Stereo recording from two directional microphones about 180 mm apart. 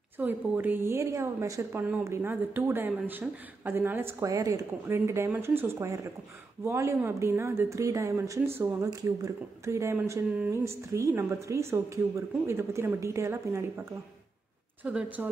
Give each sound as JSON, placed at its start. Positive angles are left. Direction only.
{"t": 0.2, "sound": "speech", "side_deg": -10}
{"t": 14.8, "sound": "speech", "side_deg": -10}